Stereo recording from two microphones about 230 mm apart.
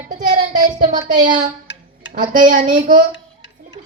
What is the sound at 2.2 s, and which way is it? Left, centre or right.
Speech, right.